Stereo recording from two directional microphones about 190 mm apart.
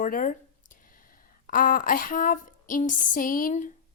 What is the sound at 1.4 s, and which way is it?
Speech, 45° left (ahead or behind).